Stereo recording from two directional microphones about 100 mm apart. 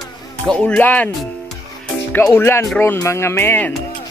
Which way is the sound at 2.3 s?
25° left (ahead or behind).